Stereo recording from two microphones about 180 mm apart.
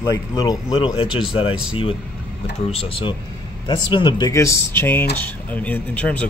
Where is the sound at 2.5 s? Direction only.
35° left (ahead or behind).